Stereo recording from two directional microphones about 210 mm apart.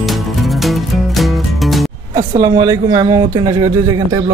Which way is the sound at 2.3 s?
20° right (ahead or behind).